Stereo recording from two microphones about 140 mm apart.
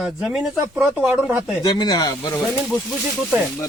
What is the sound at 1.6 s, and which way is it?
Speech, 30° left (ahead or behind).